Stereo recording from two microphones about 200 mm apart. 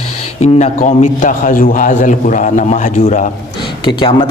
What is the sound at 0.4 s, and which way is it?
Speech, 35° left (ahead or behind).